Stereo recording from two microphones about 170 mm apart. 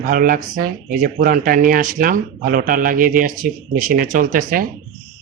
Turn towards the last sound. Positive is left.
turn(degrees=-55)  # may be behind; listen again after turning